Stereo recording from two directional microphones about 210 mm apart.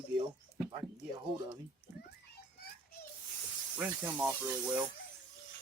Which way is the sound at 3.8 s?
5° right (ahead or behind).